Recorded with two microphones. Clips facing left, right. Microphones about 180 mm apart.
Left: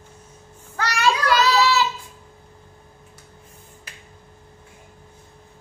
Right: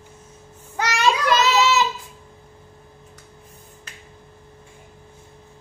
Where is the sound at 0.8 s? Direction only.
20° right (ahead or behind).